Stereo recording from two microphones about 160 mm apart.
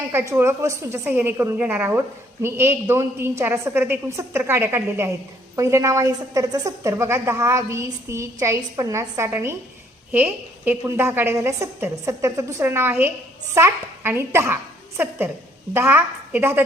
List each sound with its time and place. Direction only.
0.1 s a woman's voice: 15° right (ahead or behind)